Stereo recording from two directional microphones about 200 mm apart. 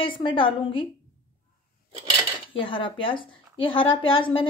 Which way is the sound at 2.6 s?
25° left (ahead or behind).